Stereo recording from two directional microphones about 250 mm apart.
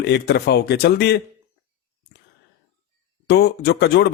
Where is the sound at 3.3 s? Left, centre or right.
Left.